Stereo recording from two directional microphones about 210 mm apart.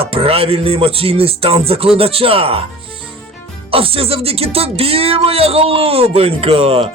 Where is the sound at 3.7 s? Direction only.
25° right (ahead or behind).